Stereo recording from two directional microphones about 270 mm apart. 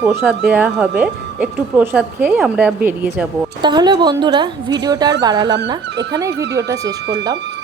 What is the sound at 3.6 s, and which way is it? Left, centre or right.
Speech, centre.